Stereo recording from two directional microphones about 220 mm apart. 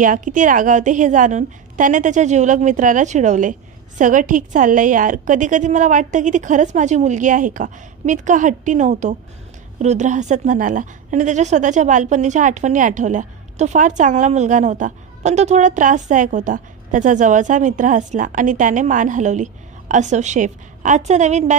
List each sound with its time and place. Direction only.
0.0 s a woman's voice: 35° right (ahead or behind)